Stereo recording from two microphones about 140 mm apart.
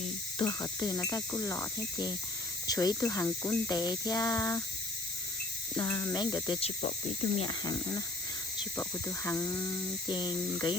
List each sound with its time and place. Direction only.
0.3 s speech: 25° left (ahead or behind)
5.7 s speech: 25° left (ahead or behind)